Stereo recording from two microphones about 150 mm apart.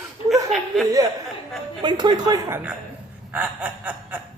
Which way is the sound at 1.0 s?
25° right (ahead or behind).